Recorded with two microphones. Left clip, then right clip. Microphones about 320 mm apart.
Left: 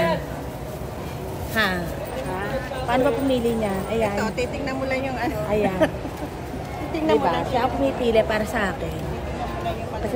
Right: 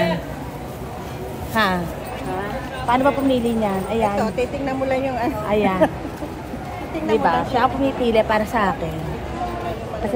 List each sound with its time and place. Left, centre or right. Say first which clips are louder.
1.5 s speech: right 3 dB; centre
2.9 s a woman's voice: right 3 dB; centre
4.2 s a woman's voice: right 3 dB; centre
5.5 s a woman's voice: right 4 dB; right
7.2 s a woman's voice: right 4 dB; right